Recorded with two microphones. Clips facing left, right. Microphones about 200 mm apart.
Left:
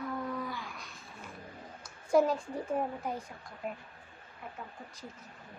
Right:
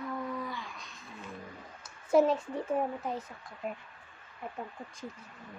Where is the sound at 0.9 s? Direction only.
15° right (ahead or behind).